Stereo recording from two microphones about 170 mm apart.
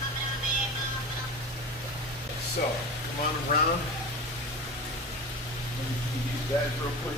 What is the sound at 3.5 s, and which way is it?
Speech, 55° left (ahead or behind).